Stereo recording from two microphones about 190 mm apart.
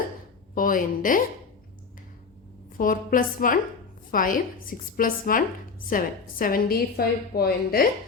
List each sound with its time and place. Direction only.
0.5 s speech: 45° left (ahead or behind)
2.7 s a woman's voice: 45° left (ahead or behind)